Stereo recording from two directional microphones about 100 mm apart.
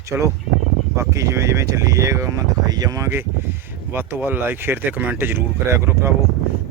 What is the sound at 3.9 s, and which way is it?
Speech, 20° right (ahead or behind).